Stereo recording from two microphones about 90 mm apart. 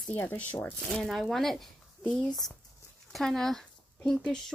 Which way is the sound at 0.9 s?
5° left (ahead or behind).